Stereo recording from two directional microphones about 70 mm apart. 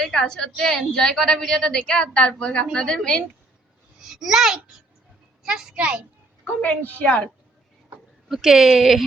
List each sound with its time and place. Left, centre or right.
0.0 s a woman's voice: centre
4.0 s a child's voice: centre
6.4 s a woman's voice: left
8.3 s speech: centre